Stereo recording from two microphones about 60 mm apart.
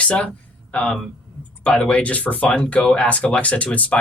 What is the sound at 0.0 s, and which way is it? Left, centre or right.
Speech, centre.